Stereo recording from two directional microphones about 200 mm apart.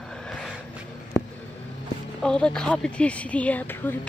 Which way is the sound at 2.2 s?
5° left (ahead or behind).